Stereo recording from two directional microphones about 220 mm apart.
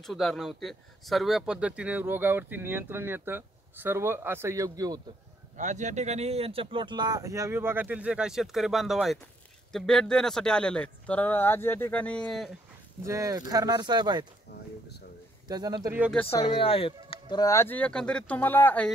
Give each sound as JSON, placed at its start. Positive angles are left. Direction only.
{"t": 0.0, "sound": "speech", "side_deg": 0}
{"t": 5.6, "sound": "speech", "side_deg": -35}
{"t": 13.0, "sound": "speech", "side_deg": -15}
{"t": 15.4, "sound": "speech", "side_deg": -15}
{"t": 16.0, "sound": "speech", "side_deg": 5}
{"t": 16.3, "sound": "speech", "side_deg": 25}